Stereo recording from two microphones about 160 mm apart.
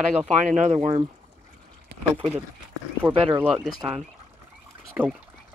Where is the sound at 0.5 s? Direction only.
45° right (ahead or behind).